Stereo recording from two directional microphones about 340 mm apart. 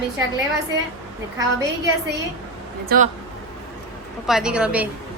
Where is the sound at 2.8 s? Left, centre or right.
Right.